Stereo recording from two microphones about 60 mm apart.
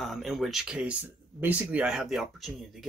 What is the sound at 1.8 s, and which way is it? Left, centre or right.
Speech, centre.